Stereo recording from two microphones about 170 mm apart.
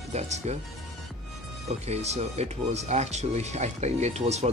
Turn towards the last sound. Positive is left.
turn(degrees=-40)  # may be behind; listen again after turning